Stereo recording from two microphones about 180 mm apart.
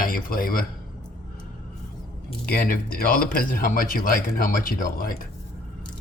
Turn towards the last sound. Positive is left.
turn(degrees=50)  # may be behind; listen again after turning